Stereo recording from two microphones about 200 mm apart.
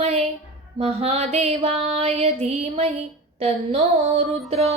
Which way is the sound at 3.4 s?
30° right (ahead or behind).